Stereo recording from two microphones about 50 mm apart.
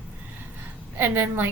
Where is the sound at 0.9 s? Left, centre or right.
Right.